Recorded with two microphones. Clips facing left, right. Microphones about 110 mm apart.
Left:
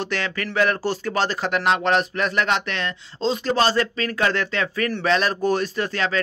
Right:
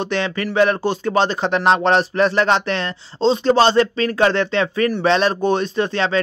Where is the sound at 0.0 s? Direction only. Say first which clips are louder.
Right 5 dB; 20° right (ahead or behind).